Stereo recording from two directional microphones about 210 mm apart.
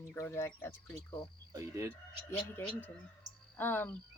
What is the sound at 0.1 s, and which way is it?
Speech, 10° left (ahead or behind).